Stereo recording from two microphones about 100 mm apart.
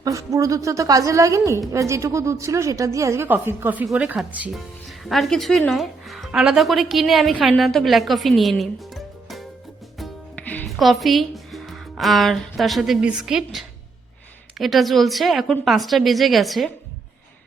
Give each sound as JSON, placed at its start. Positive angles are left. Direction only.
{"t": 0.0, "sound": "a woman's voice", "side_deg": -30}
{"t": 3.2, "sound": "a woman's voice", "side_deg": -20}
{"t": 5.0, "sound": "a woman's voice", "side_deg": 0}
{"t": 10.3, "sound": "music", "side_deg": 15}
{"t": 10.7, "sound": "a woman's voice", "side_deg": 0}